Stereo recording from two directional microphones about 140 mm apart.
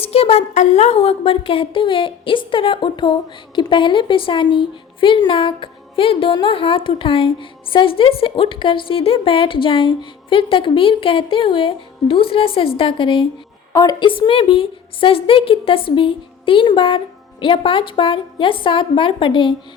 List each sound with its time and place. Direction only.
0.0 s a woman's voice: 45° left (ahead or behind)